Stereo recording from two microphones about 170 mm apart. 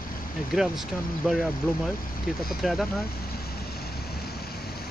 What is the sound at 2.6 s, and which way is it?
Speech, centre (ahead or behind).